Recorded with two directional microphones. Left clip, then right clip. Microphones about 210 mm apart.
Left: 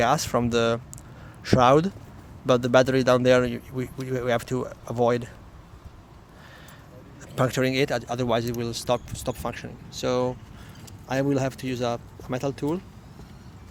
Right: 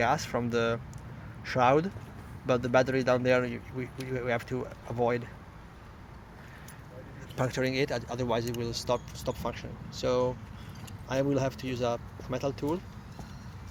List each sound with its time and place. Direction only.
0.0 s speech: 40° left (ahead or behind)
7.3 s speech: 45° left (ahead or behind)